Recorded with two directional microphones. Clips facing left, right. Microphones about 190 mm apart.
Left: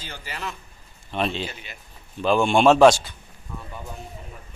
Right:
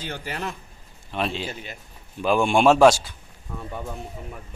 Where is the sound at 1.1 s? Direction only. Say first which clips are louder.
Left 1 dB; 5° right (ahead or behind).